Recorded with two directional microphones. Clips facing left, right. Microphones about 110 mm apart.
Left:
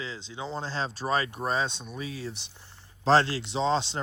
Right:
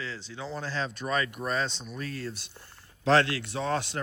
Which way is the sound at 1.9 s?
5° left (ahead or behind).